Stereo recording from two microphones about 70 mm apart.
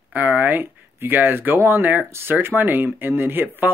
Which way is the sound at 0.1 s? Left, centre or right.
Right.